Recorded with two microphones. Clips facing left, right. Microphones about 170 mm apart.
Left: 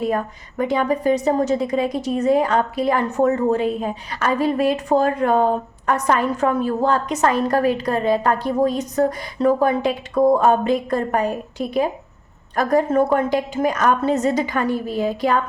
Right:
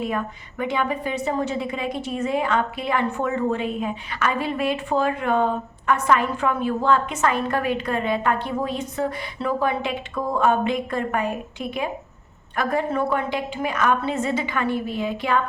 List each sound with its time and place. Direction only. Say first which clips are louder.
0.0 s a woman's voice: left 4 dB; 40° left (ahead or behind)